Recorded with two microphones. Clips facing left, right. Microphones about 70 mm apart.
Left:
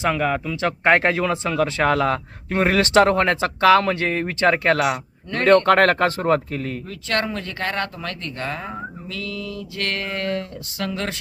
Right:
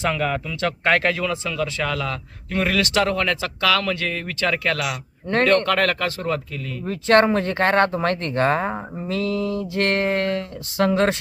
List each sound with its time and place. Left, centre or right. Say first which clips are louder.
0.0 s speech: left 2 dB; centre
0.5 s speech: left 3 dB; left
6.8 s speech: right 12 dB; right